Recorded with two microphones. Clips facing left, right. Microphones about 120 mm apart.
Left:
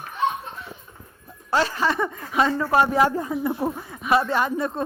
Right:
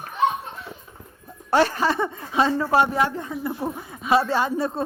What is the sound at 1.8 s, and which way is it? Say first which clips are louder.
Speech: right 1 dB; 30° right (ahead or behind).